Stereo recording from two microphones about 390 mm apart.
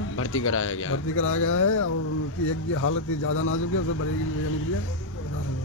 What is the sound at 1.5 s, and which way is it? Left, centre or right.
Speech, left.